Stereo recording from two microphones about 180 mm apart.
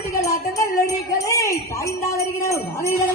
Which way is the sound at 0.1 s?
20° left (ahead or behind).